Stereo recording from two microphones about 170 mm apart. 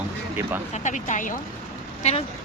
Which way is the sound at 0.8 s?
45° left (ahead or behind).